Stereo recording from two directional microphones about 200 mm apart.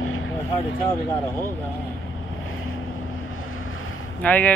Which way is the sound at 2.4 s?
90° left.